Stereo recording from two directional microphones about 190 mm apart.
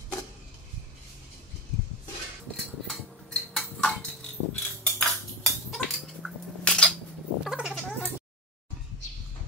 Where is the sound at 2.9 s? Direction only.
Centre (ahead or behind).